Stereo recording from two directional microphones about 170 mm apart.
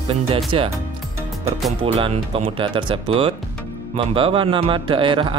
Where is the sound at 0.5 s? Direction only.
35° right (ahead or behind).